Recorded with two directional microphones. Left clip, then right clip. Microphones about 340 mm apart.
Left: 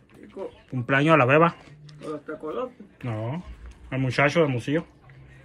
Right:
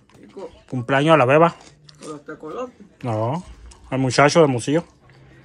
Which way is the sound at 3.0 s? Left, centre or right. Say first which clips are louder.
Right 10 dB; centre.